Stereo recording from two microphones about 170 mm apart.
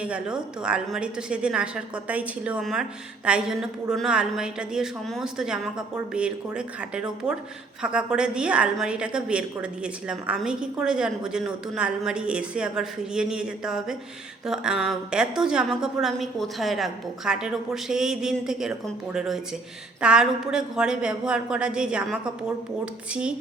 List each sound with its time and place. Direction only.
0.0 s a woman's voice: 5° right (ahead or behind)